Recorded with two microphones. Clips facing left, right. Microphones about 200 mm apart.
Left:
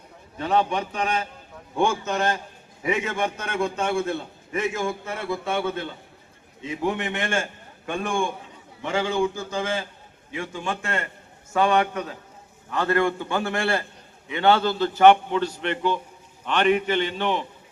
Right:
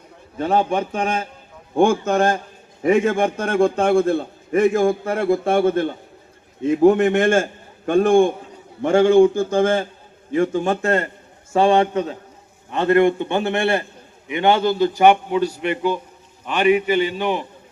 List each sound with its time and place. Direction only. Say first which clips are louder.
0.3 s a man's voice: right 4 dB; 45° right (ahead or behind)
11.5 s a man's voice: right 6 dB; 30° right (ahead or behind); by 17.4 s 10° right (ahead or behind)